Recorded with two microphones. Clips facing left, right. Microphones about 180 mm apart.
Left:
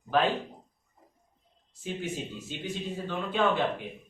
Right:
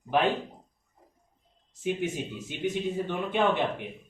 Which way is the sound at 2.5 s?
15° right (ahead or behind).